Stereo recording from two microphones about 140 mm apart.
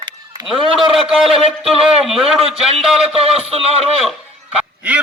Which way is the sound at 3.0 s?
45° right (ahead or behind).